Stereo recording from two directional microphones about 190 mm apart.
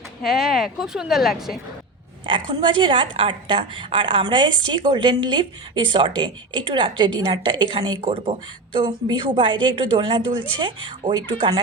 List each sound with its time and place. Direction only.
0.3 s speech: centre (ahead or behind)
2.2 s a woman's voice: 25° right (ahead or behind)